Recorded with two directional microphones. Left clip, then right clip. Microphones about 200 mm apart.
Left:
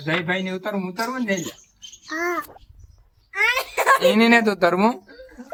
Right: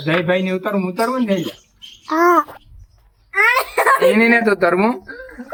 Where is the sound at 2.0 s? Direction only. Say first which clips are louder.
Right 12 dB; 35° right (ahead or behind).